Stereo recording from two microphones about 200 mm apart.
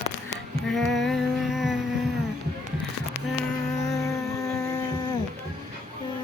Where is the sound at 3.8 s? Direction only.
15° left (ahead or behind).